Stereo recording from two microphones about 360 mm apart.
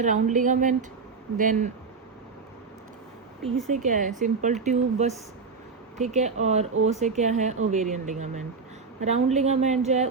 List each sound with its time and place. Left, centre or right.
0.0 s a woman's voice: right
3.7 s a woman's voice: right